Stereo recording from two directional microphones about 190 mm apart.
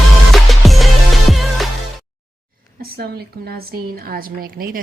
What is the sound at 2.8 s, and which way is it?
A woman's voice, 55° right (ahead or behind).